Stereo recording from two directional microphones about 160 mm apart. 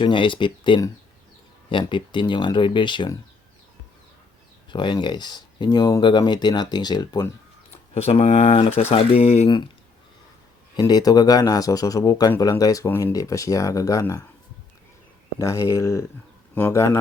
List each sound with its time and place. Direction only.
0.0 s speech: 30° left (ahead or behind)
4.7 s speech: 30° left (ahead or behind)
7.7 s speech: 40° left (ahead or behind)
10.8 s speech: 25° left (ahead or behind)
15.4 s speech: 20° left (ahead or behind)